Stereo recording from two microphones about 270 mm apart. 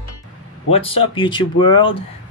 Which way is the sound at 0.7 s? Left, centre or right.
Left.